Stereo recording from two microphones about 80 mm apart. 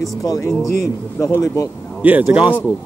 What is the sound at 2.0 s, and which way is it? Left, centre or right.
Speech, centre.